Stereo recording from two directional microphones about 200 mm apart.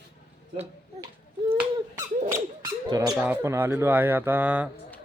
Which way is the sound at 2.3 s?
15° right (ahead or behind).